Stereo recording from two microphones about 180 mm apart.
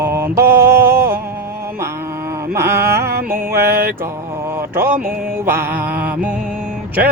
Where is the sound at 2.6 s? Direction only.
15° right (ahead or behind).